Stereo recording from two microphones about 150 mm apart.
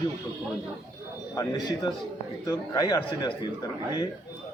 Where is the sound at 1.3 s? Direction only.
25° left (ahead or behind).